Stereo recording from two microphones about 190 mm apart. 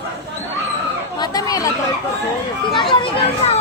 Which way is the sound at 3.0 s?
35° left (ahead or behind).